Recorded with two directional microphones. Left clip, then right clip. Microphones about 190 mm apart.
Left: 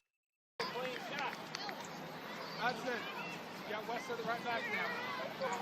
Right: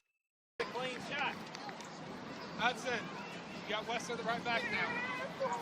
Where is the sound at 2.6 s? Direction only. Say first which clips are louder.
Right 3 dB; 50° right (ahead or behind).